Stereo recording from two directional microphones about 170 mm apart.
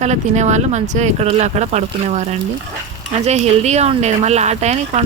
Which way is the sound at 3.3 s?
40° right (ahead or behind).